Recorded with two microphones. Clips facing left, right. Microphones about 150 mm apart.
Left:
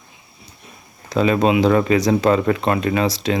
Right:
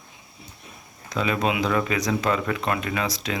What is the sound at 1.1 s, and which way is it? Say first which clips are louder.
Speech: left 8 dB; 35° left (ahead or behind).